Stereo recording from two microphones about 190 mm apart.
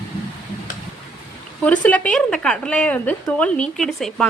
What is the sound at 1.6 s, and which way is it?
Speech, 5° left (ahead or behind).